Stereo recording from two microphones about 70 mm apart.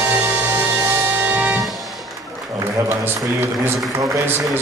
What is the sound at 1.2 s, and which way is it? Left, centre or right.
Music, right.